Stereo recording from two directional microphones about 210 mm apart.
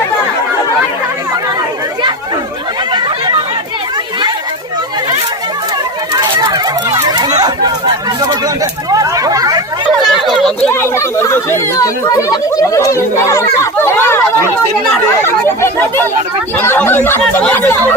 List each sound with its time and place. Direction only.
2.9 s chatter: 20° right (ahead or behind)
6.1 s chatter: 20° right (ahead or behind)
10.2 s chatter: centre (ahead or behind)
10.7 s speech: 10° left (ahead or behind)
13.8 s chatter: 10° left (ahead or behind)
15.2 s speech: 10° left (ahead or behind)